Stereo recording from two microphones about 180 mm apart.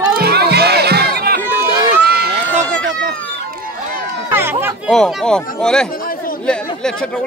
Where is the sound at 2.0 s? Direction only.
60° right (ahead or behind).